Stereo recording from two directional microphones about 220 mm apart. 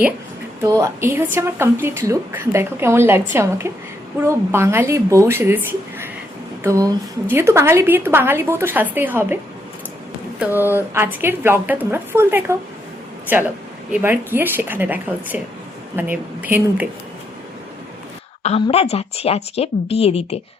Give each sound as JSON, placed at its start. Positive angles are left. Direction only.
{"t": 0.6, "sound": "a woman's voice", "side_deg": -15}
{"t": 6.6, "sound": "a woman's voice", "side_deg": -15}
{"t": 10.4, "sound": "a woman's voice", "side_deg": -10}
{"t": 13.9, "sound": "a woman's voice", "side_deg": -10}
{"t": 18.4, "sound": "speech", "side_deg": 25}